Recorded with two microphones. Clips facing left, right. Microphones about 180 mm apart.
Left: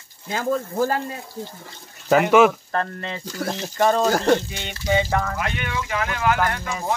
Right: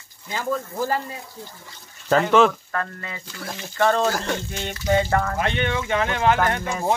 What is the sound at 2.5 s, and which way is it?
Speech, 30° left (ahead or behind).